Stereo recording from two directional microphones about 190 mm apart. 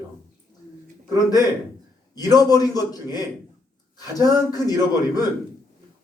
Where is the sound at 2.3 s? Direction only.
20° left (ahead or behind).